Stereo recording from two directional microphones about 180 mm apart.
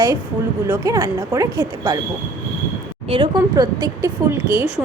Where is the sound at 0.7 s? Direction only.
20° right (ahead or behind).